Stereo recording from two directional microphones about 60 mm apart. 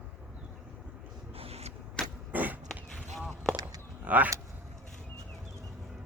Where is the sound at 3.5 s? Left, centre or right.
Right.